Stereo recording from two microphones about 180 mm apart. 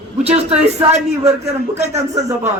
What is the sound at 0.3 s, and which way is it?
A man's voice, 35° right (ahead or behind).